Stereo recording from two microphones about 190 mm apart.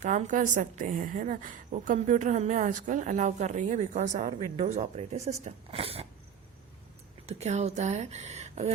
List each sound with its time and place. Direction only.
0.0 s a woman's voice: 40° right (ahead or behind)
7.3 s a woman's voice: 35° right (ahead or behind)